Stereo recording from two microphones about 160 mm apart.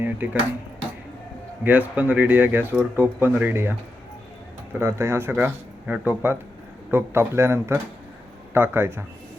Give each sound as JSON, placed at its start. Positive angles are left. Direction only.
{"t": 0.2, "sound": "speech", "side_deg": -10}
{"t": 1.6, "sound": "speech", "side_deg": -10}
{"t": 4.8, "sound": "speech", "side_deg": -15}